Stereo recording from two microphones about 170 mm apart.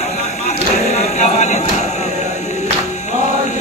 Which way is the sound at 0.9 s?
45° left (ahead or behind).